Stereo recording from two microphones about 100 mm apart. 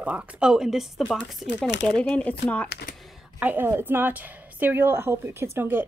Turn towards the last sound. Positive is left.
turn(degrees=-25)  # may be behind; listen again after turning